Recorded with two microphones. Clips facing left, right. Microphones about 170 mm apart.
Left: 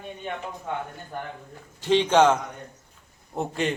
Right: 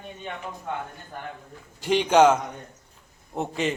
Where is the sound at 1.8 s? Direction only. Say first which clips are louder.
Right 1 dB; 10° right (ahead or behind).